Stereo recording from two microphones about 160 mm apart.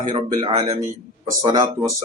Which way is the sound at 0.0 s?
30° right (ahead or behind).